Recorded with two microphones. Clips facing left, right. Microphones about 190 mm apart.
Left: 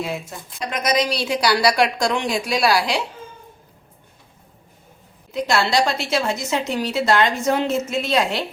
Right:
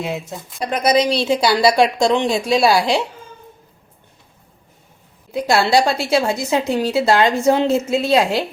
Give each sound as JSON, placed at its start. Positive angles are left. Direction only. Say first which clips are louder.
{"t": 0.0, "sound": "a woman's voice", "louder": "right 2 dB", "side_deg": -20}
{"t": 0.6, "sound": "a woman's voice", "louder": "right 5 dB", "side_deg": -35}
{"t": 5.3, "sound": "a woman's voice", "louder": "right 4 dB", "side_deg": -30}